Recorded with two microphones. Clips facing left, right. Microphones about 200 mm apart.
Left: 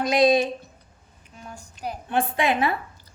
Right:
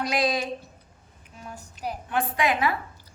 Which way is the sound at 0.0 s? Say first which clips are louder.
Left 7 dB; 25° left (ahead or behind).